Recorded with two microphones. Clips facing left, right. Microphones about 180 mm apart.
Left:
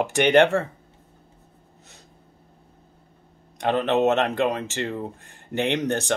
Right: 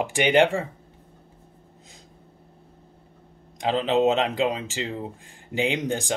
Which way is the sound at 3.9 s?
60° left (ahead or behind).